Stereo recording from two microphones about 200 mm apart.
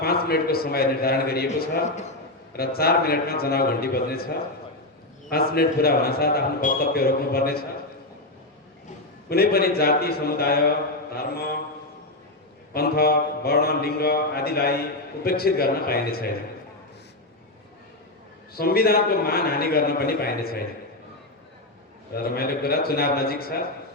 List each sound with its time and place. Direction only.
0.0 s a man's voice: 50° left (ahead or behind)
2.5 s a man's voice: 50° left (ahead or behind)
5.3 s a man's voice: 50° left (ahead or behind)
9.3 s a man's voice: 50° left (ahead or behind)
12.7 s a man's voice: 50° left (ahead or behind)
18.5 s a man's voice: 50° left (ahead or behind)
22.1 s a man's voice: 50° left (ahead or behind)